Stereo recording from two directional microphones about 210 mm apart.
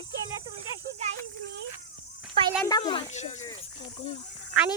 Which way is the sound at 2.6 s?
20° left (ahead or behind).